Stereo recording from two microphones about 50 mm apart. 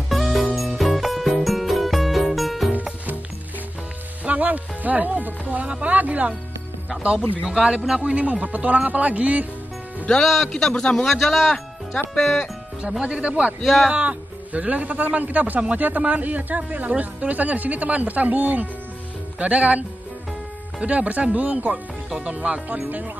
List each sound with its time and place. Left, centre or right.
0.1 s music: centre
4.2 s music: right
5.5 s speech: right
7.4 s speech: centre
10.2 s a man's voice: centre
10.5 s a man's voice: centre
11.1 s a man's voice: centre
13.0 s speech: right
13.6 s a man's voice: centre
13.8 s speech: right
20.8 s speech: right